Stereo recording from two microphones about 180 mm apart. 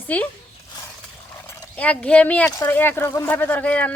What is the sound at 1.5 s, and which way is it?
Speech, 10° left (ahead or behind).